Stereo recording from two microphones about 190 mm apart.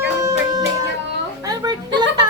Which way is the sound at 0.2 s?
15° right (ahead or behind).